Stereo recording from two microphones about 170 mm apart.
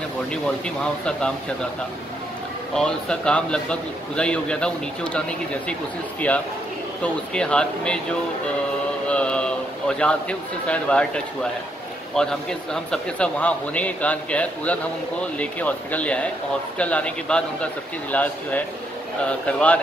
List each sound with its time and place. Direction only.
0.3 s speech: 5° left (ahead or behind)
2.7 s speech: 5° left (ahead or behind)
7.0 s speech: 5° left (ahead or behind)
9.0 s a sound: 5° left (ahead or behind)
12.2 s a man's voice: 5° left (ahead or behind)